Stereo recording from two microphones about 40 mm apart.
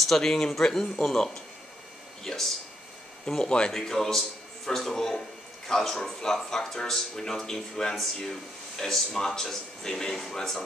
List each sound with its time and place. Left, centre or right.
0.0 s speech: centre